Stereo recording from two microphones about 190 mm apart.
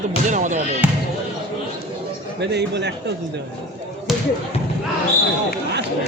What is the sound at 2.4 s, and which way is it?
Speech, 65° right (ahead or behind).